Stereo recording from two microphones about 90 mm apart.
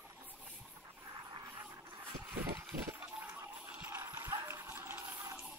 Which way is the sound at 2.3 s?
30° right (ahead or behind).